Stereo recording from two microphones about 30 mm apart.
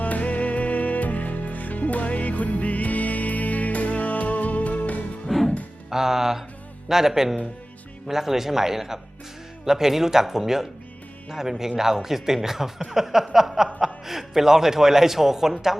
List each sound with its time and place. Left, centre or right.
0.0 s music: left
5.9 s music: centre
6.8 s speech: centre